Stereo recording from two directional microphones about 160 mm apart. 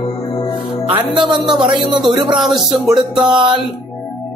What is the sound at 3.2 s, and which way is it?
Speech, 30° right (ahead or behind).